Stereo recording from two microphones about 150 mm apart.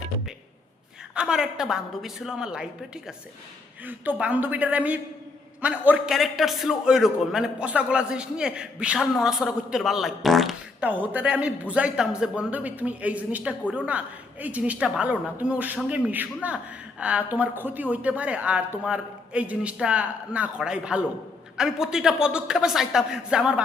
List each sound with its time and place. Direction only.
1.1 s a man's voice: 5° right (ahead or behind)
10.8 s a man's voice: 10° right (ahead or behind)